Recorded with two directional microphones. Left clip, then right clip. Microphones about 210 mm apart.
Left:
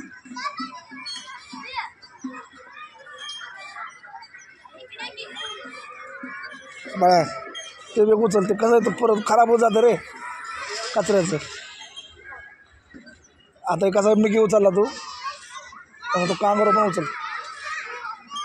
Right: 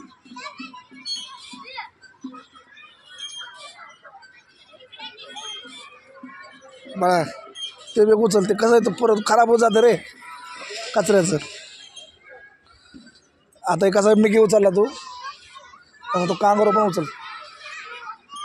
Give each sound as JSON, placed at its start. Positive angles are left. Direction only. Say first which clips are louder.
{"t": 7.0, "sound": "speech", "louder": "left 2 dB", "side_deg": -10}
{"t": 7.9, "sound": "a man's voice", "louder": "right 2 dB", "side_deg": -25}
{"t": 13.7, "sound": "a man's voice", "louder": "right 2 dB", "side_deg": -35}
{"t": 16.1, "sound": "a man's voice", "louder": "right 2 dB", "side_deg": -35}